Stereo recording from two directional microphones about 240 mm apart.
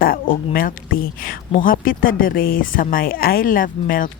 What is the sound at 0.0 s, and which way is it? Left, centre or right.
Speech, left.